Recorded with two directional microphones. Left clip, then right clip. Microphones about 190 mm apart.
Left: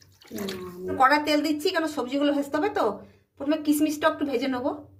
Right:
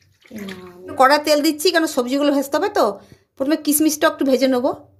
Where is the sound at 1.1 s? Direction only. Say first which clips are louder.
Right 7 dB; 55° right (ahead or behind).